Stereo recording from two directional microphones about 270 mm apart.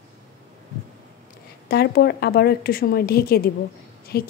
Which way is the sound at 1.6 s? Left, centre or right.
Left.